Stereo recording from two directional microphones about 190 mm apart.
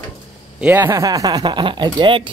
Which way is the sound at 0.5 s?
10° right (ahead or behind).